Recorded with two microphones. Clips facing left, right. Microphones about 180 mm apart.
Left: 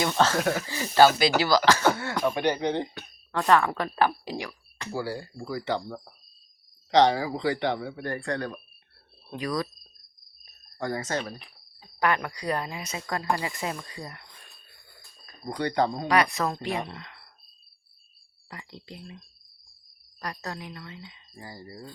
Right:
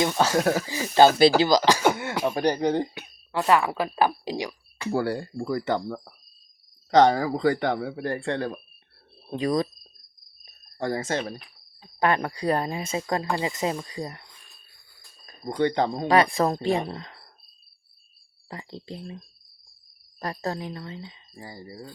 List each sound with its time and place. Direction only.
0.0 s speech: 15° right (ahead or behind)
0.3 s speech: 30° right (ahead or behind)
0.7 s speech: 20° right (ahead or behind)
2.3 s speech: 40° right (ahead or behind)
3.3 s speech: 5° right (ahead or behind)
4.9 s speech: 60° right (ahead or behind); by 8.0 s 45° right (ahead or behind)
8.0 s speech: 30° right (ahead or behind)
10.4 s a sound: 30° right (ahead or behind)
11.9 s speech: 30° right (ahead or behind)
15.3 s speech: 25° right (ahead or behind)
18.4 s speech: 30° right (ahead or behind)